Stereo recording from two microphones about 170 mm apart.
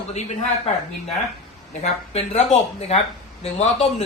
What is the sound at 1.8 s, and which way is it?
Speech, 40° left (ahead or behind).